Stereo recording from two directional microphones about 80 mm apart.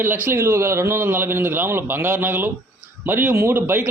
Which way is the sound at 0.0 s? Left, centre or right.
Right.